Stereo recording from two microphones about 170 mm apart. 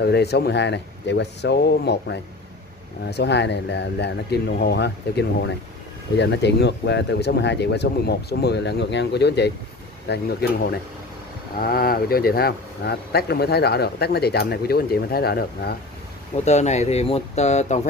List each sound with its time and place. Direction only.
0.0 s speech: 75° left (ahead or behind)
11.6 s speech: 60° left (ahead or behind)
16.4 s speech: 40° left (ahead or behind)